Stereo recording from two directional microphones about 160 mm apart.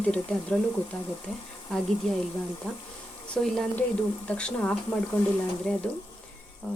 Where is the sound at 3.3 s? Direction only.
Centre (ahead or behind).